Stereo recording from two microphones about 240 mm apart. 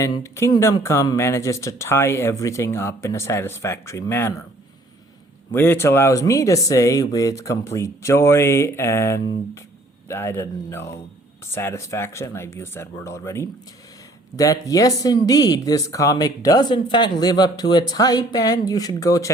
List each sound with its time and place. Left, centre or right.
0.0 s speech: centre
5.5 s speech: centre